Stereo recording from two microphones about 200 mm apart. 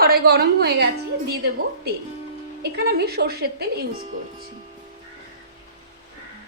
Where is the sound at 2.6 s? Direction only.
50° right (ahead or behind).